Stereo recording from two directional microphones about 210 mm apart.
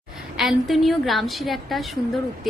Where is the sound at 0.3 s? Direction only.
Centre (ahead or behind).